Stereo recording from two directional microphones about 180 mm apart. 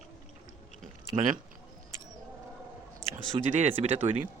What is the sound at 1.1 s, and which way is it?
Speech, 45° right (ahead or behind).